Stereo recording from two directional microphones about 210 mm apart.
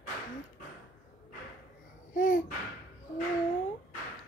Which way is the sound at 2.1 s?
40° left (ahead or behind).